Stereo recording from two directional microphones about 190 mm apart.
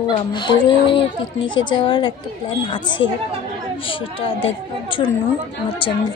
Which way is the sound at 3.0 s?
80° left.